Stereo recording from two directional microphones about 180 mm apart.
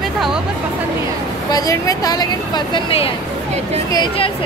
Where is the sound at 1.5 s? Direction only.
20° left (ahead or behind).